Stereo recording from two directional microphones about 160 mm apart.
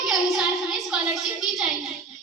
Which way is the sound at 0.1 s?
Centre (ahead or behind).